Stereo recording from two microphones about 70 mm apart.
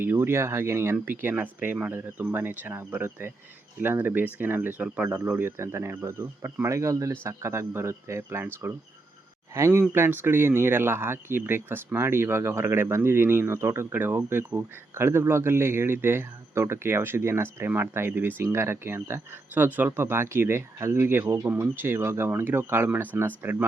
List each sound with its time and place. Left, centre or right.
0.0 s speech: right
5.0 s speech: right
9.6 s speech: right